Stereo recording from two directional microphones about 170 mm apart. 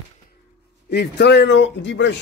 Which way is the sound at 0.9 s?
80° left.